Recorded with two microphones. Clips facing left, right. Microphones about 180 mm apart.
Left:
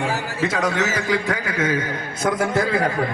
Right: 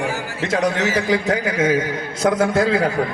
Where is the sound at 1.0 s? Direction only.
60° left (ahead or behind).